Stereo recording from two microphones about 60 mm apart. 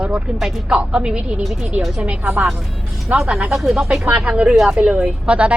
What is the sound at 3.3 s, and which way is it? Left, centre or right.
Speech, right.